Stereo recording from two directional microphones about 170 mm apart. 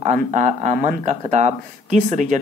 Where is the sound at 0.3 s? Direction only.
45° right (ahead or behind).